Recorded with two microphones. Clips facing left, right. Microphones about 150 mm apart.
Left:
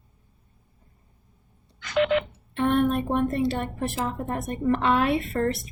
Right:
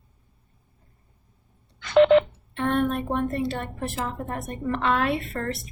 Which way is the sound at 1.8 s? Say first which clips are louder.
Right 7 dB; 30° right (ahead or behind).